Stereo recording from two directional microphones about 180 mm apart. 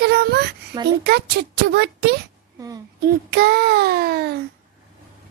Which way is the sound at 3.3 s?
60° right (ahead or behind).